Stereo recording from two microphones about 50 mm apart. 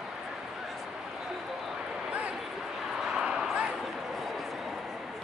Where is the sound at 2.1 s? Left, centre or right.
Right.